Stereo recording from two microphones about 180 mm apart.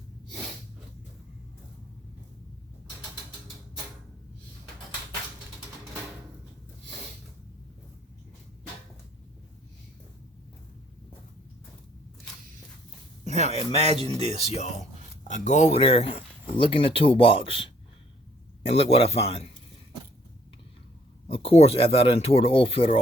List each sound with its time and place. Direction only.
13.7 s speech: 35° right (ahead or behind)
14.3 s speech: 35° left (ahead or behind)
21.2 s speech: 30° left (ahead or behind)